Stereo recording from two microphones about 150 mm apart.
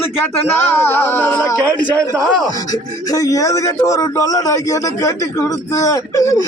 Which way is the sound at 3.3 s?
20° left (ahead or behind).